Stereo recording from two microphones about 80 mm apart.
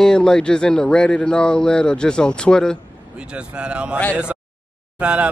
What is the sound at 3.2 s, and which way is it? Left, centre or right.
Speech, centre.